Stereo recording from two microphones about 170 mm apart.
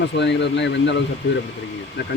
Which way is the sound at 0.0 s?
90° left.